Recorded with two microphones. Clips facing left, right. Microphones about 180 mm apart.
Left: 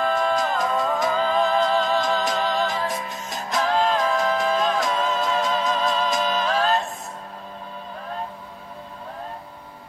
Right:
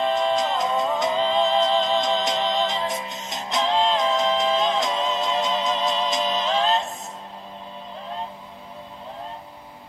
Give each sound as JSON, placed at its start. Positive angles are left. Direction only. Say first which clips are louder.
{"t": 0.0, "sound": "music", "louder": "even", "side_deg": -25}